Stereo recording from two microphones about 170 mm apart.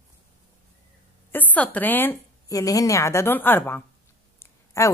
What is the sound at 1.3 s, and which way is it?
A woman's voice, 10° left (ahead or behind).